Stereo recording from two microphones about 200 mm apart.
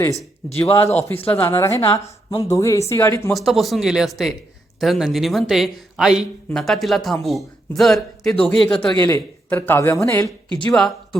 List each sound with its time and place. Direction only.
0.5 s a woman's voice: 15° left (ahead or behind)
3.3 s speech: centre (ahead or behind)
10.8 s speech: centre (ahead or behind)